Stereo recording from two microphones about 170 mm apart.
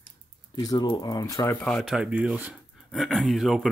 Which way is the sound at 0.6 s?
25° left (ahead or behind).